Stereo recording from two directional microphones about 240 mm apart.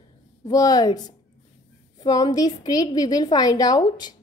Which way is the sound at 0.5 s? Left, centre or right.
Centre.